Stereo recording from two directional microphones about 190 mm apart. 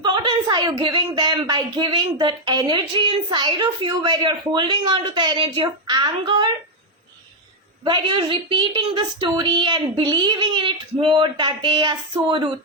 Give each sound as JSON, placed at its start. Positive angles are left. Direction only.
{"t": 0.0, "sound": "speech", "side_deg": -25}
{"t": 7.9, "sound": "speech", "side_deg": -25}